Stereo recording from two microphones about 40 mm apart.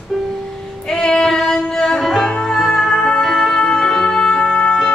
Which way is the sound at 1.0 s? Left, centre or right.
Centre.